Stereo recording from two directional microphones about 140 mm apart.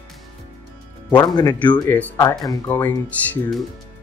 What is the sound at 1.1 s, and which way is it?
Speech, 30° left (ahead or behind).